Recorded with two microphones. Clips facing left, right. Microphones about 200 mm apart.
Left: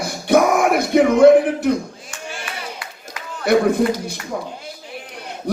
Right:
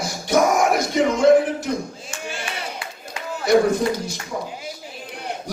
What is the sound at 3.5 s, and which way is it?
Speech, 60° left (ahead or behind).